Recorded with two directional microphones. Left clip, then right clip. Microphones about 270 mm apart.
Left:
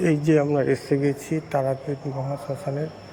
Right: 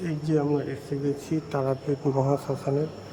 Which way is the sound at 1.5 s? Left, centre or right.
Centre.